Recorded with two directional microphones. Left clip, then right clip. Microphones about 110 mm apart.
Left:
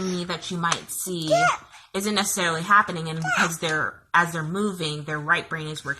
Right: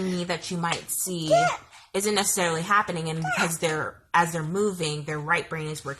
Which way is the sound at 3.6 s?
20° right (ahead or behind).